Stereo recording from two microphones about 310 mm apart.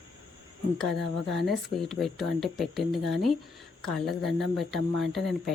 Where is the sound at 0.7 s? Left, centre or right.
Centre.